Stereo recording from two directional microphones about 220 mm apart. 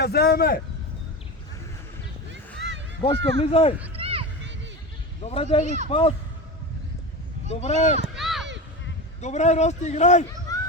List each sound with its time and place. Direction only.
0.0 s speech: 45° left (ahead or behind)
2.6 s a sound: 55° right (ahead or behind)
3.2 s speech: 55° right (ahead or behind)
3.4 s a man's voice: 25° left (ahead or behind)
3.9 s a sound: 25° right (ahead or behind)
5.2 s a man's voice: 30° left (ahead or behind)
5.6 s a man's voice: 30° right (ahead or behind)
5.9 s a man's voice: 25° left (ahead or behind)
7.5 s a man's voice: 30° left (ahead or behind)
8.0 s a sound: centre (ahead or behind)
9.2 s a man's voice: 30° left (ahead or behind)